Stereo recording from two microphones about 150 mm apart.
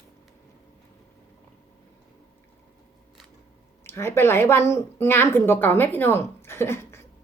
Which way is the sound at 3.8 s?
15° left (ahead or behind).